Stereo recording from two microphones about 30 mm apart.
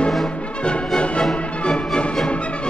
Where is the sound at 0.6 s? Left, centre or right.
Left.